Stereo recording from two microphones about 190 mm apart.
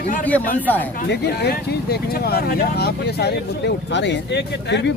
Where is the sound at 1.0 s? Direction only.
60° left (ahead or behind).